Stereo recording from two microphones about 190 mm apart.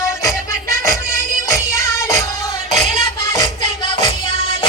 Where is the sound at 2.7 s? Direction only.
35° right (ahead or behind).